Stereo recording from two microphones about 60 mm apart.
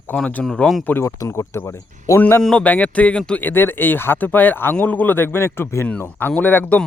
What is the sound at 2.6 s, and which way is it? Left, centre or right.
Speech, left.